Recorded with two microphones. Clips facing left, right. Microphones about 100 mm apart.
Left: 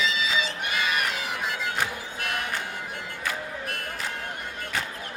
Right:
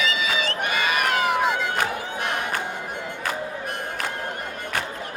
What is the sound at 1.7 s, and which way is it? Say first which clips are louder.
Music: right 5 dB; 60° right (ahead or behind).